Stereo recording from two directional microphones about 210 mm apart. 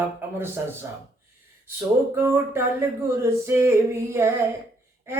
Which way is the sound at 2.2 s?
10° right (ahead or behind).